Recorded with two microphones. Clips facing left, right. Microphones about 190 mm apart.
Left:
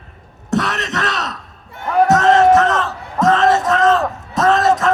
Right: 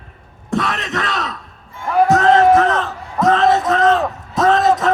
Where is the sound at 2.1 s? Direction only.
90° left.